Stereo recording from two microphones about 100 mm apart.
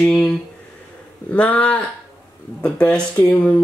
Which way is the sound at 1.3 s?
15° left (ahead or behind).